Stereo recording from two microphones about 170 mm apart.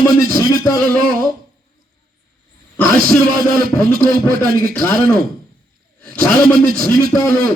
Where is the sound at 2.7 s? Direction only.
10° left (ahead or behind).